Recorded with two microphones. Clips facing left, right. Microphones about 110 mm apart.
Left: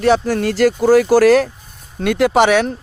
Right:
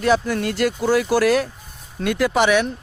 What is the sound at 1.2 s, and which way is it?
Speech, 80° left.